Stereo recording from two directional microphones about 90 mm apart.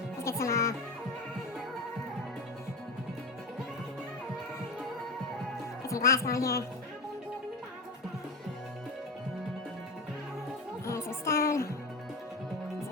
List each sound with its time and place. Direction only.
0.2 s music: 30° left (ahead or behind)
5.9 s speech: 35° left (ahead or behind)
10.8 s music: 30° left (ahead or behind)